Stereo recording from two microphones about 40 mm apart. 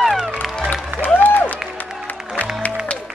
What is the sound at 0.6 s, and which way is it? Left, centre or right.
Music, left.